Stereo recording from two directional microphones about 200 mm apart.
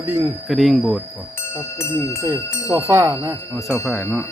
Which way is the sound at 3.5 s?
Centre (ahead or behind).